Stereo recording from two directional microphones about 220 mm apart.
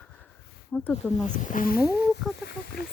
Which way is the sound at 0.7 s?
5° left (ahead or behind).